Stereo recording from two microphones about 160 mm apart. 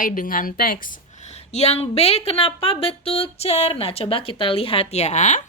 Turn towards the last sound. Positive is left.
turn(degrees=45)  # may be behind; listen again after turning